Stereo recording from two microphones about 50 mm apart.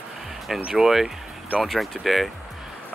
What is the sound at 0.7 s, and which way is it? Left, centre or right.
Speech, centre.